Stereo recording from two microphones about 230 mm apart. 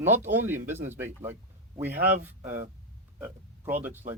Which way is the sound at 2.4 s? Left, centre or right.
Right.